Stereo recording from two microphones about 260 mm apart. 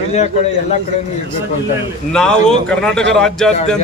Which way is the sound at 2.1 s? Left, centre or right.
Centre.